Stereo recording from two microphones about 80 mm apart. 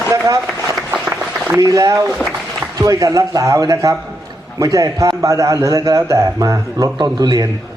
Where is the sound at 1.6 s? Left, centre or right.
Right.